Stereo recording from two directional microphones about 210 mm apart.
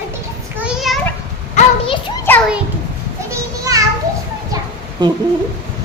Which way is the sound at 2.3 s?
10° left (ahead or behind).